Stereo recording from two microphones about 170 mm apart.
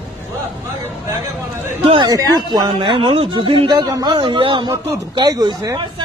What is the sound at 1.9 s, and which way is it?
A man's voice, 30° right (ahead or behind).